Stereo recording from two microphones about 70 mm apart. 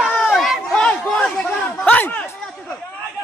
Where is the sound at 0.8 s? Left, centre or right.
Centre.